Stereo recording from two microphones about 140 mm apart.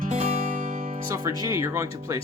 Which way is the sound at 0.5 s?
65° right (ahead or behind).